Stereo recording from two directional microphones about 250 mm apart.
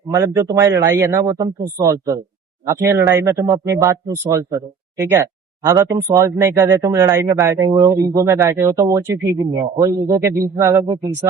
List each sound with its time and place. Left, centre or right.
0.1 s speech: centre
9.9 s a man's voice: right
10.6 s speech: centre